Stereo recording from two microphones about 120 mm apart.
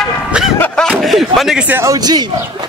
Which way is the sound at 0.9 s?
Centre (ahead or behind).